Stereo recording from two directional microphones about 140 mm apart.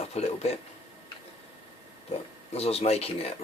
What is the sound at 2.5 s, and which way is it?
Speech, 50° left (ahead or behind).